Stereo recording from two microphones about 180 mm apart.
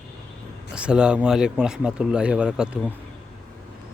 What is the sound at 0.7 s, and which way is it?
A man's voice, 5° right (ahead or behind).